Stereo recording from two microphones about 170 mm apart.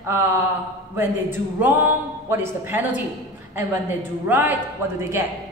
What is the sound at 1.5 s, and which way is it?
A man's voice, 10° right (ahead or behind).